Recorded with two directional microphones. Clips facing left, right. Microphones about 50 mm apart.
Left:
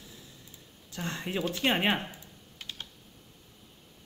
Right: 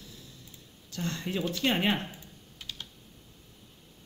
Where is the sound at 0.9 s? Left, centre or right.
Left.